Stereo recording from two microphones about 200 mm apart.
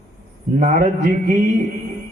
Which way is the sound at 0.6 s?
40° right (ahead or behind).